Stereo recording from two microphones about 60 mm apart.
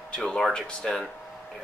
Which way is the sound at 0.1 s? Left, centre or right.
Centre.